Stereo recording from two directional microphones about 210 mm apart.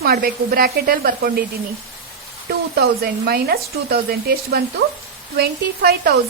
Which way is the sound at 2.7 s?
50° right (ahead or behind).